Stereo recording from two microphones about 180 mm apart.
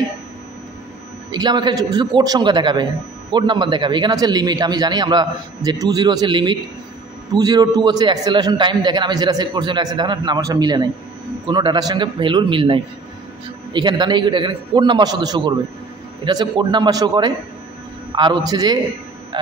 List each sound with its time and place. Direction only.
1.3 s a man's voice: 25° right (ahead or behind)